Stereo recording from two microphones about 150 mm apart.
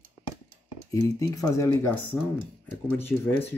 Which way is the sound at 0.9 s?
25° left (ahead or behind).